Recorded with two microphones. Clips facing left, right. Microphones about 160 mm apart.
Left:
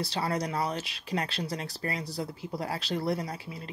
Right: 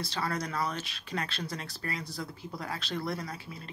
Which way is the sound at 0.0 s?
35° left (ahead or behind).